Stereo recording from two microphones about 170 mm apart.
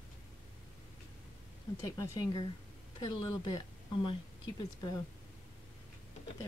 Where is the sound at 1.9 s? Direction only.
20° left (ahead or behind).